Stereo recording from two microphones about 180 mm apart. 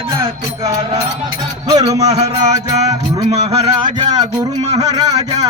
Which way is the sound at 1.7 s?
20° right (ahead or behind).